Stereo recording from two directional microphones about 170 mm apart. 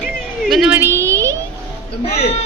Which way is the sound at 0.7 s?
15° right (ahead or behind).